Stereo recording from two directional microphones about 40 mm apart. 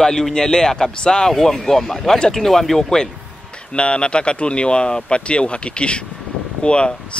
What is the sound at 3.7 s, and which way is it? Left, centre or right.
Speech, left.